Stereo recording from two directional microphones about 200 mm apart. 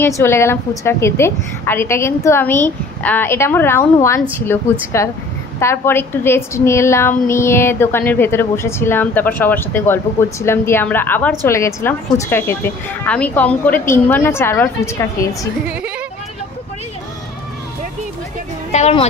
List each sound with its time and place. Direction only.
0.0 s a woman's voice: 10° left (ahead or behind)
18.7 s speech: 30° left (ahead or behind)